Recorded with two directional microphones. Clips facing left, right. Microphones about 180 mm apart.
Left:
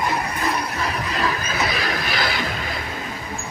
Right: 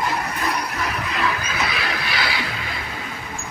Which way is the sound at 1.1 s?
35° left (ahead or behind).